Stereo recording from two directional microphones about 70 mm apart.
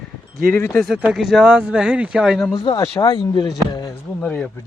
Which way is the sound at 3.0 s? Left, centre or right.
Left.